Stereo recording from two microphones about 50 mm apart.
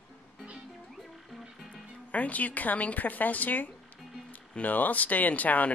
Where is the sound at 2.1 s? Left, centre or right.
Left.